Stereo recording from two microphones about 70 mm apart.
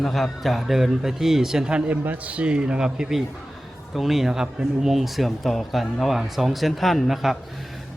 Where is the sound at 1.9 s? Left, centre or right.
Right.